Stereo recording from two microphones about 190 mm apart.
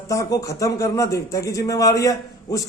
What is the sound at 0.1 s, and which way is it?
A man's voice, 15° left (ahead or behind).